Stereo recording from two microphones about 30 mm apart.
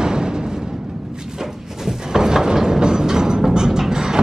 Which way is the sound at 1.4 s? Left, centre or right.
Centre.